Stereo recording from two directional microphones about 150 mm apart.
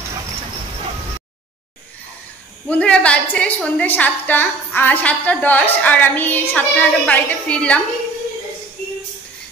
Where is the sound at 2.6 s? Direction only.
10° left (ahead or behind).